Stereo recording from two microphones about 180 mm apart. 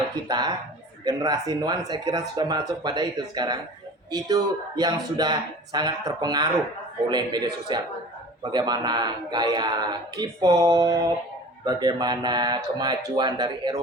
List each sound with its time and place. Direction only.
0.3 s speech: 25° right (ahead or behind)